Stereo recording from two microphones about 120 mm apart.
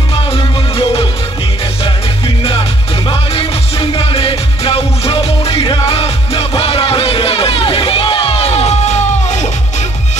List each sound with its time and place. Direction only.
0.1 s music: 50° left (ahead or behind); by 9.8 s 75° left (ahead or behind)